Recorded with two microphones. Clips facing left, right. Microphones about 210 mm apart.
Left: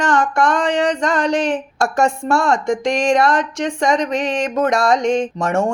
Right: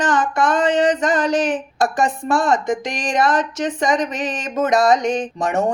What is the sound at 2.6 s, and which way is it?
Speech, 5° right (ahead or behind).